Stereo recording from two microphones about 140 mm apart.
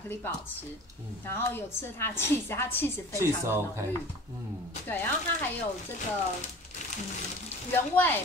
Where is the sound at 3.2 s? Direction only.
20° right (ahead or behind).